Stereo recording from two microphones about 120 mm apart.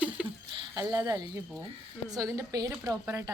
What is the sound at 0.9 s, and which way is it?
A woman's voice, 30° right (ahead or behind).